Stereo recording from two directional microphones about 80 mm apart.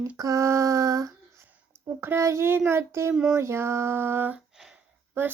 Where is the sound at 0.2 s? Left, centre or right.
Right.